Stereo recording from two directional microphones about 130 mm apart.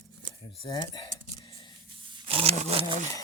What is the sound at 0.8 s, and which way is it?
Speech, 35° left (ahead or behind).